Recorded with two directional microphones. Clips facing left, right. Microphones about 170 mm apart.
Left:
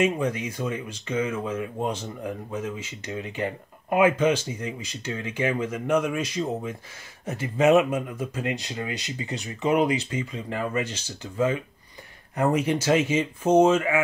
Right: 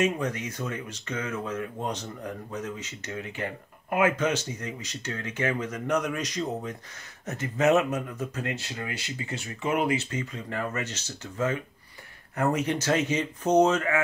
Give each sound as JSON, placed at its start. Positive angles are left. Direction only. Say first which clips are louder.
{"t": 0.0, "sound": "speech", "louder": "left 3 dB", "side_deg": 10}